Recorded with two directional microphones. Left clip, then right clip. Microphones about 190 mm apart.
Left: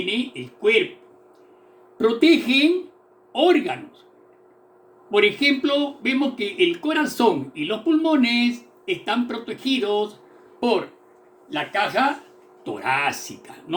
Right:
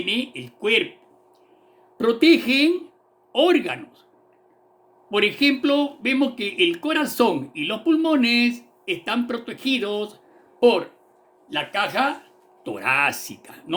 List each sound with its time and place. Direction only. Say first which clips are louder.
0.1 s speech: right 1 dB; 60° right (ahead or behind)
2.0 s speech: even; 55° right (ahead or behind)
5.1 s speech: left 2 dB; 60° right (ahead or behind)
11.4 s speech: left 1 dB; 50° right (ahead or behind)